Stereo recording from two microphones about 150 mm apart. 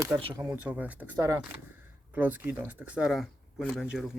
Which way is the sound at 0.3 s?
15° right (ahead or behind).